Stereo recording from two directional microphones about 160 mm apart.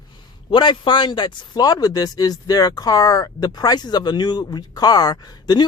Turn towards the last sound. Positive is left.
turn(degrees=25)  # may be behind; listen again after turning